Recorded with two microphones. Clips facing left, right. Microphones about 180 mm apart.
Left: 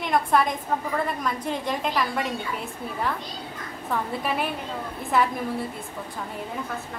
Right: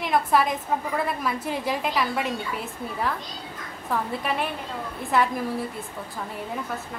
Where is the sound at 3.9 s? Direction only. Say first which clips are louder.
Even; centre (ahead or behind).